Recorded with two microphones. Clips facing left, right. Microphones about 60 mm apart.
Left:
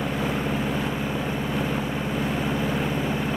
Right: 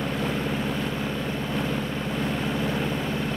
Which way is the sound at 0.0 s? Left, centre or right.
Centre.